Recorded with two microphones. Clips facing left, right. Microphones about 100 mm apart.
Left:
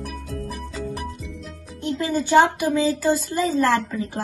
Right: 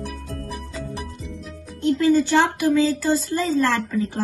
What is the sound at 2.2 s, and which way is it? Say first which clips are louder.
A woman's voice: left 2 dB; 20° left (ahead or behind).